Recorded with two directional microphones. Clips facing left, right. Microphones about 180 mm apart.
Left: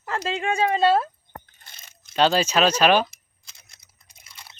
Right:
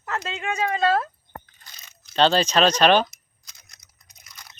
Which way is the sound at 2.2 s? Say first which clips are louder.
Right 1 dB; 5° left (ahead or behind).